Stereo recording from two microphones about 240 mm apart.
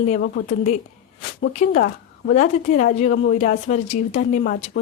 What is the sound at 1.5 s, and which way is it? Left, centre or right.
A woman's voice, left.